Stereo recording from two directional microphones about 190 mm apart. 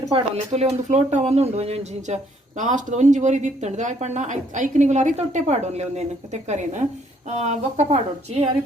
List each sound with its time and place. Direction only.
0.1 s speech: 35° right (ahead or behind)